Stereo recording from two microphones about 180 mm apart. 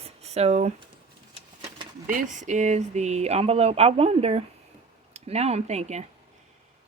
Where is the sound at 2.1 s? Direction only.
45° right (ahead or behind).